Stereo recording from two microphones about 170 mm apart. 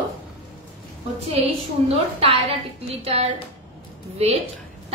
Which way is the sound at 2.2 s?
35° right (ahead or behind).